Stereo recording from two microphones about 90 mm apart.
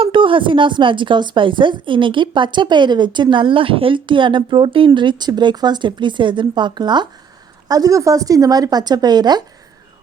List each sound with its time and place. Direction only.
0.0 s a woman's voice: 75° right (ahead or behind)
4.9 s speech: 55° right (ahead or behind)
7.7 s speech: 40° right (ahead or behind)